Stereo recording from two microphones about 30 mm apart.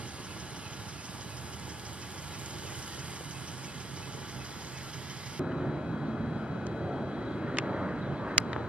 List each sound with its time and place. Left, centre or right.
5.4 s vehicle: centre